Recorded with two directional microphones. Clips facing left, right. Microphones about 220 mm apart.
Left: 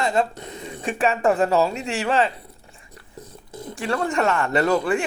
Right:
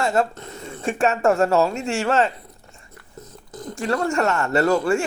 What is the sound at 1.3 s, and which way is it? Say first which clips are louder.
Speech: right 1 dB; 5° left (ahead or behind).